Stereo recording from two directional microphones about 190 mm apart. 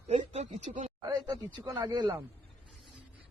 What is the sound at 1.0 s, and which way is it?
Speech, 20° right (ahead or behind).